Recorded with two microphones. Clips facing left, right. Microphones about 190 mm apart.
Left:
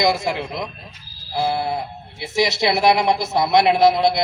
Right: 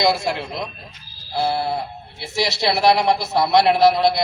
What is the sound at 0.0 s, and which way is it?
A man's voice, 15° left (ahead or behind).